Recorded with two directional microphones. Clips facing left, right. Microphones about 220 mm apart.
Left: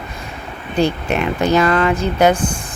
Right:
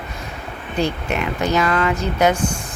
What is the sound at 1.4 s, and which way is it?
Speech, 30° left (ahead or behind).